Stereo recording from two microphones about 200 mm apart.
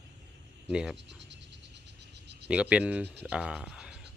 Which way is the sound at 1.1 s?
60° right (ahead or behind).